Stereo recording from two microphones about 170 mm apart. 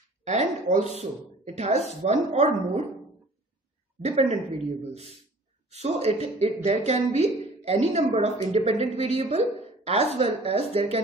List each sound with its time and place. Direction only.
0.2 s a sound: 45° right (ahead or behind)
0.9 s a woman's voice: 40° right (ahead or behind)
4.0 s a woman's voice: 35° right (ahead or behind)